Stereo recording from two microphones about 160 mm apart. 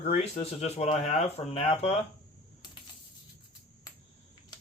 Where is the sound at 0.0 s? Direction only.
40° left (ahead or behind).